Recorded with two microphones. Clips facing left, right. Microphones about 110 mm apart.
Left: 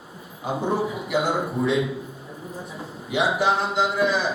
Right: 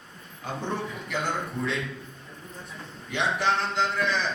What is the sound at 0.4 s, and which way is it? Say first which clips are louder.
A man's voice: left 7 dB; 10° left (ahead or behind).